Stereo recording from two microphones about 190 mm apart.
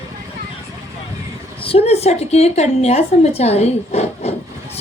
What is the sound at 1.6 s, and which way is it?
A woman's voice, 30° left (ahead or behind).